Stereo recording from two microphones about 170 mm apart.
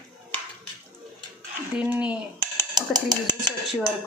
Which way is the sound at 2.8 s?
25° right (ahead or behind).